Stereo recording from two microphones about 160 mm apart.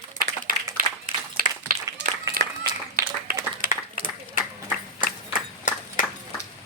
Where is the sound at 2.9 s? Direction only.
60° right (ahead or behind).